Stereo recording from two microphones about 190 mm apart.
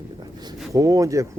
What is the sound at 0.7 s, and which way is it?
Speech, 15° right (ahead or behind).